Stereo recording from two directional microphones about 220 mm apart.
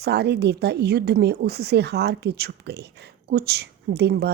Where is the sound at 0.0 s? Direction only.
50° right (ahead or behind).